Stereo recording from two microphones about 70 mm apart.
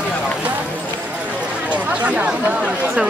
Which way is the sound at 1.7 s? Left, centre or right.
Right.